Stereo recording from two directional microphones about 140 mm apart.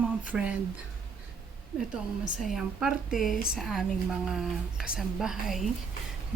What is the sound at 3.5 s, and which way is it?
Speech, centre (ahead or behind).